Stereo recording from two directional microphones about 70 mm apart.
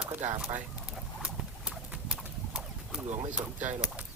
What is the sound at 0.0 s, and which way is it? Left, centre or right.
Speech, centre.